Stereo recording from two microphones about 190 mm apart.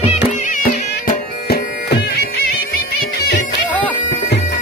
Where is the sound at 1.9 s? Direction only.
55° left (ahead or behind).